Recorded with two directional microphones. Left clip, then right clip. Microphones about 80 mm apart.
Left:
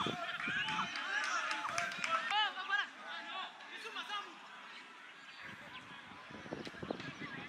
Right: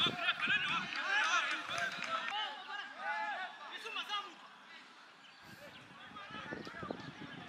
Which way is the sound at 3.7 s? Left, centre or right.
Centre.